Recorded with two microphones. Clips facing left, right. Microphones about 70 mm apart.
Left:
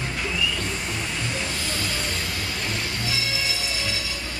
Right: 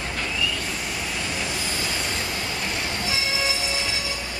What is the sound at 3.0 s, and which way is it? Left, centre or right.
Music, right.